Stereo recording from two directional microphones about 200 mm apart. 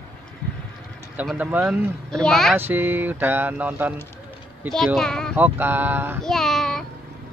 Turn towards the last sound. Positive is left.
turn(degrees=0)  # may be behind; listen again after turning